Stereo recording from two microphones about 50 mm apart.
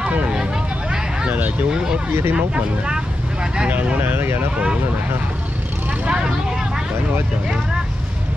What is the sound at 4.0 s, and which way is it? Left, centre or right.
Speech, right.